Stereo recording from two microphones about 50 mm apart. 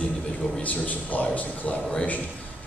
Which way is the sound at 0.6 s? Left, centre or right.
Left.